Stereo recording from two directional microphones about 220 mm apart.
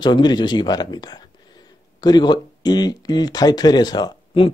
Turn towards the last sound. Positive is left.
turn(degrees=20)  # may be behind; listen again after turning